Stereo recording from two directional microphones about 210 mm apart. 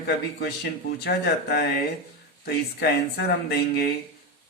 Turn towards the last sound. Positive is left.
turn(degrees=50)  # may be behind; listen again after turning